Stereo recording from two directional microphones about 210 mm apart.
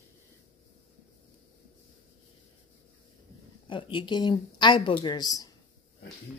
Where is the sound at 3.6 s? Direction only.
25° left (ahead or behind).